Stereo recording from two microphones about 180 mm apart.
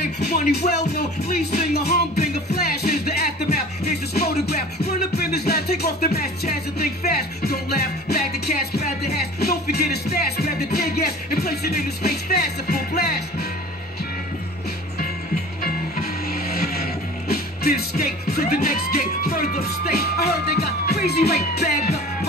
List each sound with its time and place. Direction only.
0.2 s music: 65° left (ahead or behind)
15.6 s music: 55° left (ahead or behind)